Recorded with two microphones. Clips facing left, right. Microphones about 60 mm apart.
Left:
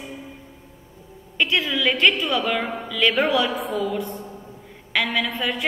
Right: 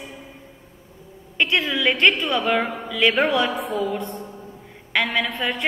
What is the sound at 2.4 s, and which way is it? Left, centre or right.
A woman's voice, centre.